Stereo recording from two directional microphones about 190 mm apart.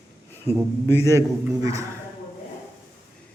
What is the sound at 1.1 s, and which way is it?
Speech, 15° right (ahead or behind).